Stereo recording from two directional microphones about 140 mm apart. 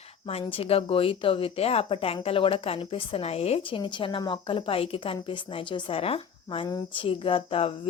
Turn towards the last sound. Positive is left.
turn(degrees=40)  # may be behind; listen again after turning